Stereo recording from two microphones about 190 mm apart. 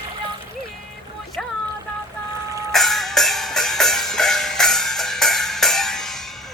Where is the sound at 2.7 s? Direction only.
Centre (ahead or behind).